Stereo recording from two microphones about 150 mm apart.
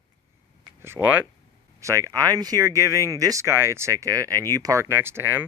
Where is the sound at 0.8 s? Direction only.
15° right (ahead or behind).